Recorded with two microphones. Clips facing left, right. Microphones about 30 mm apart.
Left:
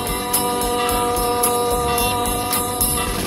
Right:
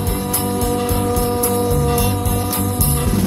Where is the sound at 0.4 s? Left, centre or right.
Left.